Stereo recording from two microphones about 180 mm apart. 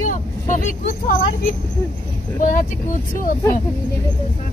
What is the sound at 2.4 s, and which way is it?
Speech, 45° left (ahead or behind).